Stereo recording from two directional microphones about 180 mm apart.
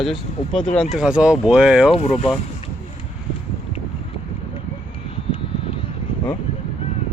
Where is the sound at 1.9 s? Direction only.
30° left (ahead or behind).